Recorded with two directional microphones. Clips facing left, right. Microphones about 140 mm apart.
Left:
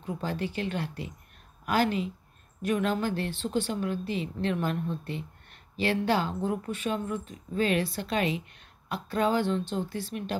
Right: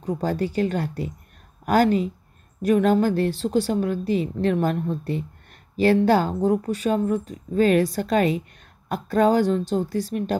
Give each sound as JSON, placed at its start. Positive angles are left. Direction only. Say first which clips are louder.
{"t": 0.0, "sound": "a woman's voice", "louder": "right 8 dB", "side_deg": -40}